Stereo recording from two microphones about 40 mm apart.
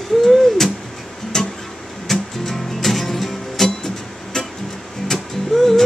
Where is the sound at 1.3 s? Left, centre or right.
Centre.